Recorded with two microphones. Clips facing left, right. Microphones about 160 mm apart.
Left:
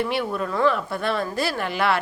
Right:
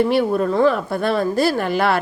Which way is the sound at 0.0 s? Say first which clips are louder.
Right 8 dB; 40° right (ahead or behind).